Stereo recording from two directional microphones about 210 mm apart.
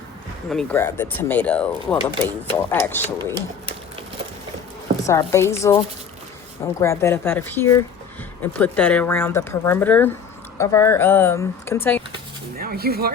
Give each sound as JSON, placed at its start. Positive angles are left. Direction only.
{"t": 0.5, "sound": "speech", "side_deg": 10}
{"t": 5.0, "sound": "speech", "side_deg": 15}
{"t": 12.5, "sound": "speech", "side_deg": -45}